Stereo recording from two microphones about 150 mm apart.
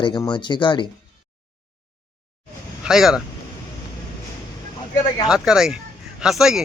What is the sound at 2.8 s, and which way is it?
Speech, 5° right (ahead or behind).